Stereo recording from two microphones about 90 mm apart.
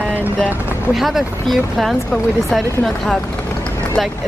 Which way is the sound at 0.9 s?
5° right (ahead or behind).